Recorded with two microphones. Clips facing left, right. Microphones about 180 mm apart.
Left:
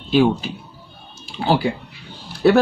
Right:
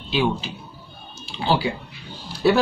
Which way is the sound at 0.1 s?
45° left (ahead or behind).